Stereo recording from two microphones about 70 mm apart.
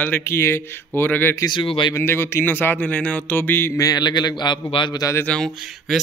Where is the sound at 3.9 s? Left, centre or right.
Left.